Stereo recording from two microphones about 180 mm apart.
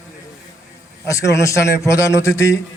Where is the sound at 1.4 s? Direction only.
15° left (ahead or behind).